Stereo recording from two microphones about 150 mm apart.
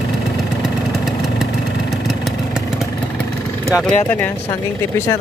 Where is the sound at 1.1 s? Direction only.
Centre (ahead or behind).